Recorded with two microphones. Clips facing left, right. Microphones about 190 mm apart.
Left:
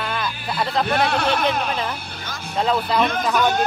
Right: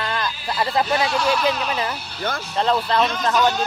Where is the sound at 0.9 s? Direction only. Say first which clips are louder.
Even; 60° left (ahead or behind).